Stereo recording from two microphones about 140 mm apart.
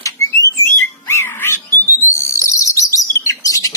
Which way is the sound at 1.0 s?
20° left (ahead or behind).